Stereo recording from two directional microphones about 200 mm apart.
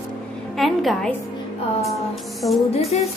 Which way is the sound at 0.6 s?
Centre (ahead or behind).